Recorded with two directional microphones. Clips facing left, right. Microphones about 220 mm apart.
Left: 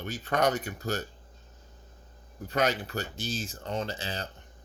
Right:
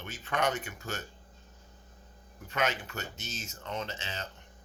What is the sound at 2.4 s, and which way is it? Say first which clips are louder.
Speech: left 4 dB; 35° left (ahead or behind).